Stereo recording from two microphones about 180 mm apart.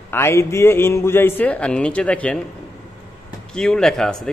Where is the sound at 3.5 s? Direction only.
5° left (ahead or behind).